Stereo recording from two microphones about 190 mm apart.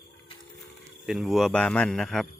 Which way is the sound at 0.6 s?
Centre (ahead or behind).